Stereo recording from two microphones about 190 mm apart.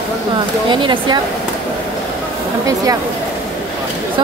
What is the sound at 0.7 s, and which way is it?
Speech, 25° right (ahead or behind).